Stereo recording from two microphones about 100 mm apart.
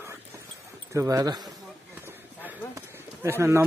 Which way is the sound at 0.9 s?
35° right (ahead or behind).